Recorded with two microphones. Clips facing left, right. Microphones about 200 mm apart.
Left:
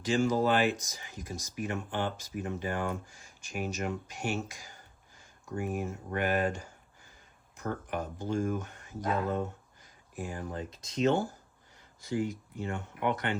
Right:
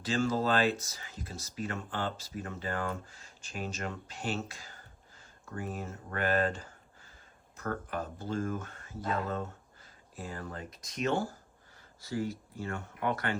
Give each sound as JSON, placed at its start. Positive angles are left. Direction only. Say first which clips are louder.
{"t": 0.0, "sound": "speech", "louder": "left 3 dB", "side_deg": 15}
{"t": 10.7, "sound": "speech", "louder": "left 5 dB", "side_deg": 25}